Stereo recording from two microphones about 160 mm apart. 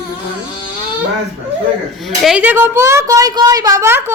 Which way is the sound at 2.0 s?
Centre (ahead or behind).